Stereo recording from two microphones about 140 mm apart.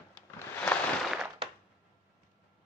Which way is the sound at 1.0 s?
5° right (ahead or behind).